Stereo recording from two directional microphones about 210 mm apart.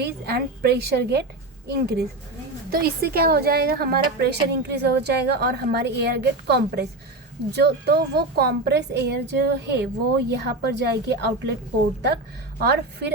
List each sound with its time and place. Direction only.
0.0 s a woman's voice: 50° right (ahead or behind)
12.5 s a woman's voice: 50° right (ahead or behind)